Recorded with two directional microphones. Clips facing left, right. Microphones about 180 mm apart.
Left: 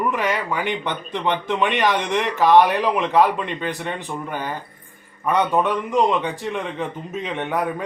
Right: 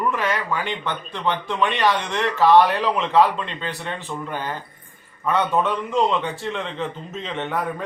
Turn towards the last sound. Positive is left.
turn(degrees=10)  # may be behind; listen again after turning